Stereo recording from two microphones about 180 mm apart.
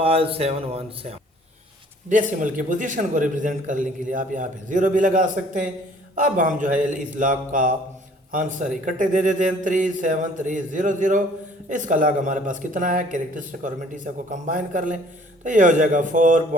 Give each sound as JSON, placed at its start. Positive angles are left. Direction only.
{"t": 0.0, "sound": "speech", "side_deg": -30}
{"t": 2.0, "sound": "a man's voice", "side_deg": -45}